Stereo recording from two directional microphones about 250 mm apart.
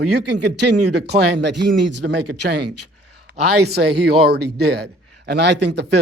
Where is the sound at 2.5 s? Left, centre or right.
Right.